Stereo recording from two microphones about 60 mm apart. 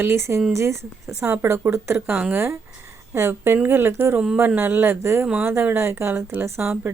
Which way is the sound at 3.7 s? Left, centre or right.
Right.